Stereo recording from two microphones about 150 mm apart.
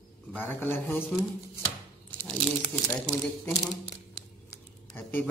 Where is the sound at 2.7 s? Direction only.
15° left (ahead or behind).